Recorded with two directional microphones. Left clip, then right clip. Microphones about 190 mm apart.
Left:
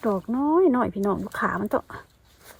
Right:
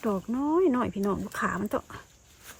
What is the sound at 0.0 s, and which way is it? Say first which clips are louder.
Speech: left 5 dB; 15° left (ahead or behind).